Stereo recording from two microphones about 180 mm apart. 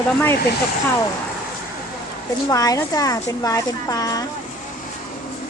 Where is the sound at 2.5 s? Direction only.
20° left (ahead or behind).